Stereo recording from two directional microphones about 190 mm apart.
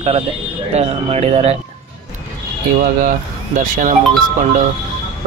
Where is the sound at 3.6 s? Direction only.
45° right (ahead or behind).